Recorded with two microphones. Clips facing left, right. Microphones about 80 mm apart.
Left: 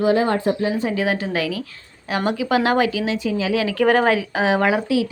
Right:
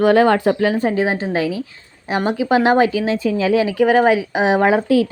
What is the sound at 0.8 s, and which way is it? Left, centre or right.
Speech, right.